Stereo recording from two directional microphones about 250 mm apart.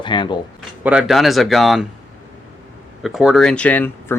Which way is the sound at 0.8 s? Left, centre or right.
Centre.